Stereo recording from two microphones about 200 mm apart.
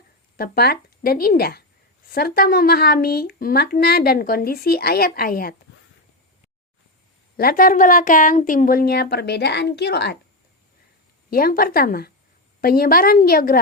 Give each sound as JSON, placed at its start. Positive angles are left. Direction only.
{"t": 0.3, "sound": "speech", "side_deg": 50}
{"t": 7.3, "sound": "speech", "side_deg": 45}
{"t": 11.3, "sound": "speech", "side_deg": 50}